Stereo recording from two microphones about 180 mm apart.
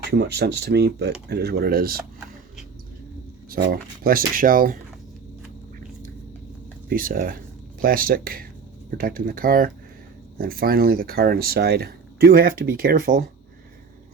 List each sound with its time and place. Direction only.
0.0 s speech: 65° right (ahead or behind)
3.5 s speech: 55° right (ahead or behind)
6.8 s speech: 55° right (ahead or behind)